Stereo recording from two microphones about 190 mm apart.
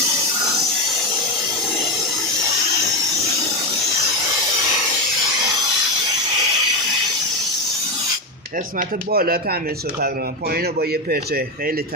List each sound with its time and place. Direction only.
9.1 s a man's voice: 50° right (ahead or behind)